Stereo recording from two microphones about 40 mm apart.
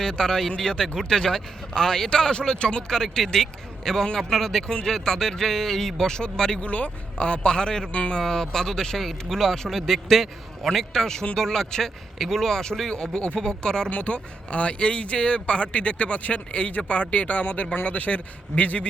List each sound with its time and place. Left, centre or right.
0.0 s speech: centre
4.6 s speech: left
4.9 s speech: centre
6.6 s speech: left; by 13.9 s centre
13.9 s speech: left